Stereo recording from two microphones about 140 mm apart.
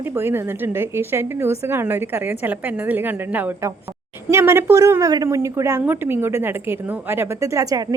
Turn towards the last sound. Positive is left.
turn(degrees=-25)  # may be behind; listen again after turning